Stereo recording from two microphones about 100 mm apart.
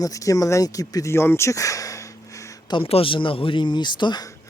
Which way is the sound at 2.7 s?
70° left (ahead or behind).